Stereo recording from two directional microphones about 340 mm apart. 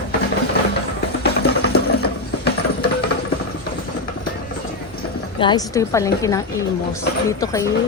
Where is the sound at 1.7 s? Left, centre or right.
Left.